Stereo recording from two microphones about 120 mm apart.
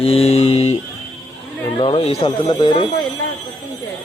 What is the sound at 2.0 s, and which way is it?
Speech, 55° left (ahead or behind).